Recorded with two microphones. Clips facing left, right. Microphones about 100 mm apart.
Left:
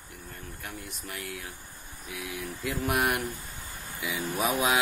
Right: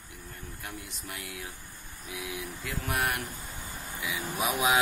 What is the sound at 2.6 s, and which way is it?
Mantra, 10° left (ahead or behind).